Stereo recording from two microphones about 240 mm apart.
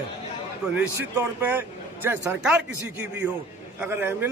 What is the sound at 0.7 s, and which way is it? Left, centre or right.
Speech, centre.